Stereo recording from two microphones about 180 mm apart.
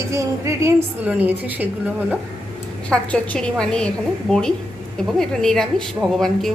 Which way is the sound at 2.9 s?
5° left (ahead or behind).